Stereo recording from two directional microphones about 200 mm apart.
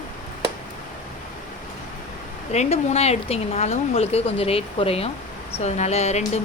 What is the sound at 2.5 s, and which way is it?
Speech, 35° left (ahead or behind).